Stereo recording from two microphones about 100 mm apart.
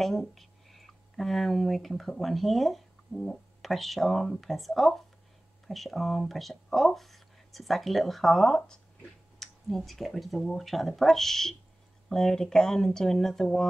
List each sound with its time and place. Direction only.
0.0 s speech: centre (ahead or behind)